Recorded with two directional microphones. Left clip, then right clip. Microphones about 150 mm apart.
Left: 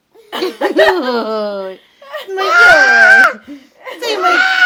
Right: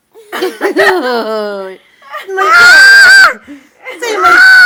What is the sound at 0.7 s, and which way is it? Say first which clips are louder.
Speech: right 2 dB; 10° left (ahead or behind).